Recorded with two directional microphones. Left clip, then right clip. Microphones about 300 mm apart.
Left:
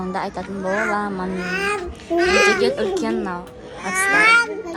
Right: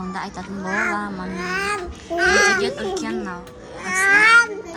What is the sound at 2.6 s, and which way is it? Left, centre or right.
Speech, centre.